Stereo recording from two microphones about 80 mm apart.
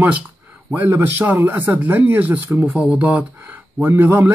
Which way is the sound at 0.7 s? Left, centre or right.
Right.